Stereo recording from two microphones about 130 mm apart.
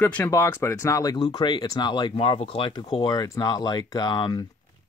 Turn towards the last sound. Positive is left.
turn(degrees=35)  # may be behind; listen again after turning